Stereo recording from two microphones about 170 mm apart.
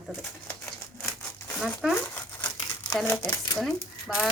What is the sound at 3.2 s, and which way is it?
Speech, 15° left (ahead or behind).